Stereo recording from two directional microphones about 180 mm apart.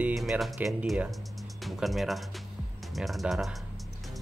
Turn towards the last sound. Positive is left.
turn(degrees=0)  # may be behind; listen again after turning